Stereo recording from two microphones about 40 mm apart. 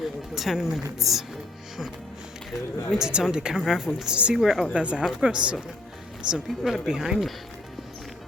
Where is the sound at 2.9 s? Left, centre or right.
Centre.